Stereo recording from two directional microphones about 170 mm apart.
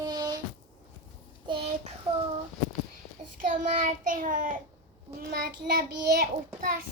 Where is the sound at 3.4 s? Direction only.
50° right (ahead or behind).